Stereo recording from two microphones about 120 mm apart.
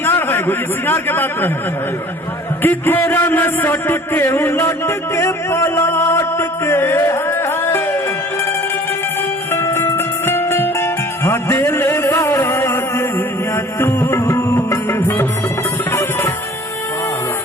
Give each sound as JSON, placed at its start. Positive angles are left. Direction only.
{"t": 0.0, "sound": "a man's voice", "side_deg": 20}
{"t": 2.6, "sound": "a sound", "side_deg": 15}
{"t": 9.5, "sound": "music", "side_deg": 20}